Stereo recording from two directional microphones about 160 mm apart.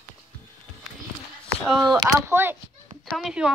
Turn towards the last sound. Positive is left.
turn(degrees=-5)  # may be behind; listen again after turning